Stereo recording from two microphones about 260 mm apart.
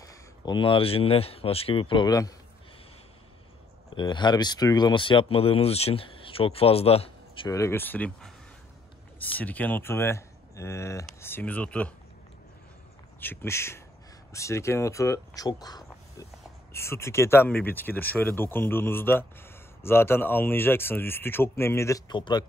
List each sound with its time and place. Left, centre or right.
0.0 s speech: centre
3.9 s speech: centre
13.2 s speech: centre